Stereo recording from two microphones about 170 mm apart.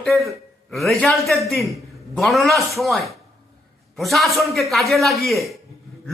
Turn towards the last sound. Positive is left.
turn(degrees=0)  # may be behind; listen again after turning